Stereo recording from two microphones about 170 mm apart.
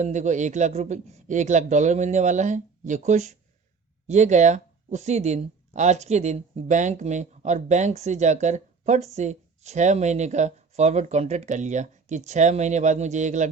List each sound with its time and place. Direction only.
0.0 s speech: 45° right (ahead or behind)